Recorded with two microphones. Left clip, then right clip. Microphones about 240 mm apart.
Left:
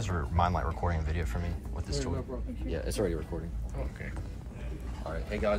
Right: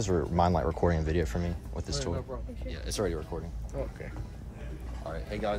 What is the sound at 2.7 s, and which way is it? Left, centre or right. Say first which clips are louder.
Speech: left 4 dB; centre.